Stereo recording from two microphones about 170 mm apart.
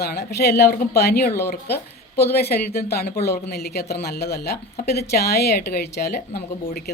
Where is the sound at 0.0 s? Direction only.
75° left (ahead or behind).